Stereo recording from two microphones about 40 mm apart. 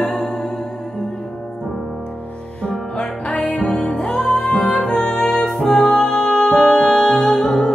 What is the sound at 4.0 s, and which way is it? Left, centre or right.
Music, centre.